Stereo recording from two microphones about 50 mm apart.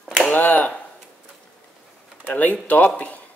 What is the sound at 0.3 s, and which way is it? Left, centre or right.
Finger snapping, left.